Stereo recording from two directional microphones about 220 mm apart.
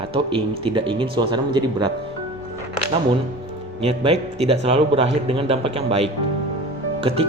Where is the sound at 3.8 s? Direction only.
25° right (ahead or behind).